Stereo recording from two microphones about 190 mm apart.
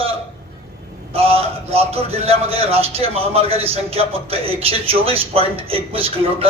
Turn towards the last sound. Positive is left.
turn(degrees=-30)  # may be behind; listen again after turning